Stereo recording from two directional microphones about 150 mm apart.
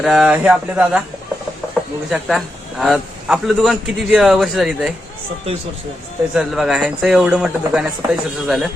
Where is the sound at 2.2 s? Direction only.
Centre (ahead or behind).